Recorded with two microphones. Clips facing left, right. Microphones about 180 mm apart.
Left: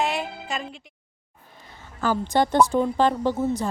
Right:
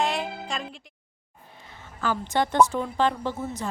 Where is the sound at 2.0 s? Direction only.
35° left (ahead or behind).